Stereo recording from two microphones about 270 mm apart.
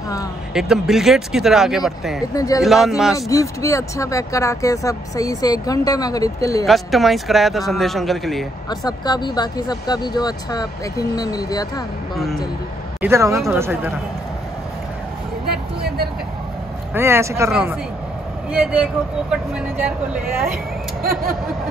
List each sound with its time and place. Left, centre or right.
0.6 s speech: centre
2.3 s speech: centre
2.6 s speech: centre
3.2 s speech: centre
6.6 s speech: centre
8.6 s speech: centre
13.0 s speech: centre
15.5 s vehicle: right
16.9 s speech: centre